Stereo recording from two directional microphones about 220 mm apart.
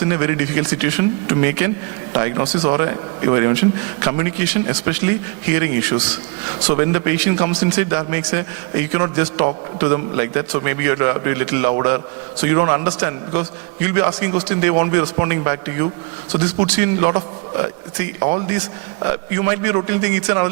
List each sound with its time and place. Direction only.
0.1 s a man's voice: 15° right (ahead or behind)